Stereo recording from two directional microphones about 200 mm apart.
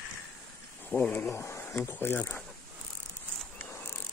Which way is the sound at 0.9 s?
10° left (ahead or behind).